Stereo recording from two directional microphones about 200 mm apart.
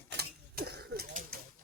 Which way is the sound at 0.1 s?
50° right (ahead or behind).